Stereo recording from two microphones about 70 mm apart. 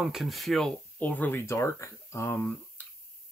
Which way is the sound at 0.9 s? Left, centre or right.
Left.